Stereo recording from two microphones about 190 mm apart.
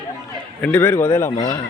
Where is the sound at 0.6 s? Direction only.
10° left (ahead or behind).